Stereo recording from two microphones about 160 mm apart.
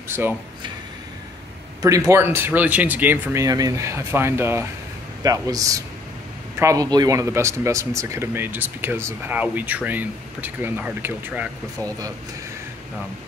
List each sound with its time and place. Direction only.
0.1 s speech: 15° right (ahead or behind)
1.8 s a man's voice: 20° right (ahead or behind)